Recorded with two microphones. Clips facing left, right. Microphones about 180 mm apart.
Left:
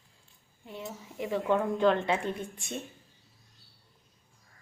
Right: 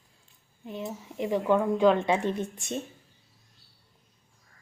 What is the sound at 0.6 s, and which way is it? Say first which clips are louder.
Speech: right 5 dB; 20° right (ahead or behind).